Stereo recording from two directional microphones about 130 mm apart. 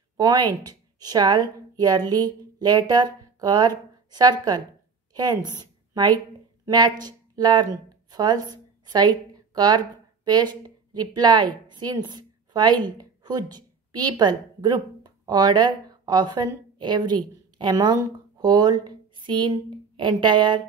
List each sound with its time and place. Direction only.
0.2 s a woman's voice: 30° right (ahead or behind)